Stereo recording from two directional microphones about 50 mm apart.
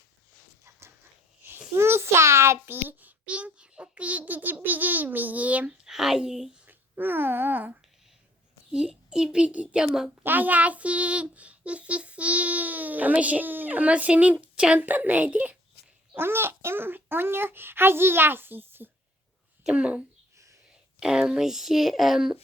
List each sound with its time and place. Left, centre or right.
0.6 s dog: right
1.4 s babbling: right
2.6 s a child's voice: right
5.7 s speech: centre
6.7 s speech: right
8.7 s a child's voice: centre
10.2 s a child's voice: right
14.3 s a woman's voice: centre
14.8 s a child's voice: right
16.1 s a child's voice: right
19.6 s a child's voice: right
21.0 s speech: centre